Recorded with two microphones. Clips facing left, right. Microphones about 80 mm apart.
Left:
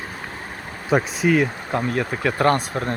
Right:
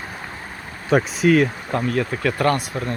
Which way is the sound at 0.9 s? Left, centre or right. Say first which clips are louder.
Right 2 dB; centre.